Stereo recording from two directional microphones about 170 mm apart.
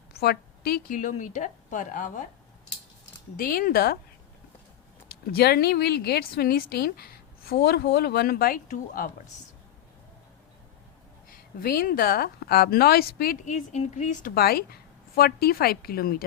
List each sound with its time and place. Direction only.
0.1 s a woman's voice: 70° left (ahead or behind)
0.9 s a woman's voice: 50° left (ahead or behind)
3.3 s a woman's voice: 55° left (ahead or behind)
5.0 s a woman's voice: 70° left (ahead or behind); by 9.0 s 50° left (ahead or behind)
11.3 s a woman's voice: 55° left (ahead or behind)
13.4 s a woman's voice: 45° left (ahead or behind); by 16.2 s 60° left (ahead or behind)